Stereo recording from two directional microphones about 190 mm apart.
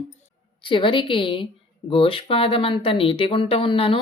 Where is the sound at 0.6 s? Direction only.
25° left (ahead or behind).